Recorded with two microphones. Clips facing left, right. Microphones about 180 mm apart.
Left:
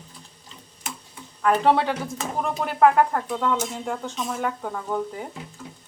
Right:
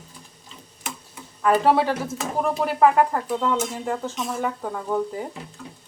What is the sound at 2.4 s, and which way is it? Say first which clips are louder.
Dishes: right 1 dB; 5° right (ahead or behind).